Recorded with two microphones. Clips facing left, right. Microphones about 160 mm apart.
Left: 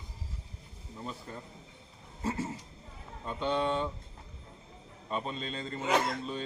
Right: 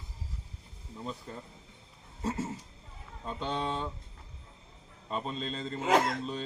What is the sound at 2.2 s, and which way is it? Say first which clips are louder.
Speech: even; centre (ahead or behind).